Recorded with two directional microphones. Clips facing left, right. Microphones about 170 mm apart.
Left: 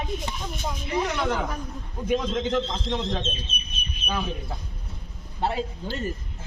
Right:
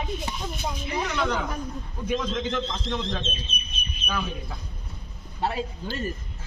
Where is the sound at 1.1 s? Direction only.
10° left (ahead or behind).